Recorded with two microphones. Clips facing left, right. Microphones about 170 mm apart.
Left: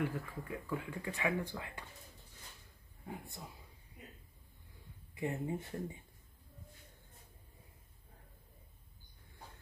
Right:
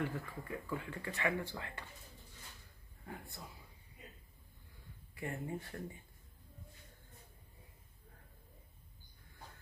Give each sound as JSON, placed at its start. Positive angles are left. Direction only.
{"t": 0.0, "sound": "speech", "side_deg": 10}
{"t": 3.1, "sound": "speech", "side_deg": 20}
{"t": 5.1, "sound": "speech", "side_deg": 20}